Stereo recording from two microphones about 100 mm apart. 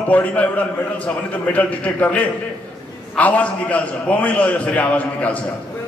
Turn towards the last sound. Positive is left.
turn(degrees=15)  # may be behind; listen again after turning